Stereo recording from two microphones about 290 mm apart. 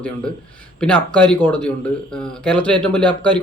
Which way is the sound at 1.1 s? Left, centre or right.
Centre.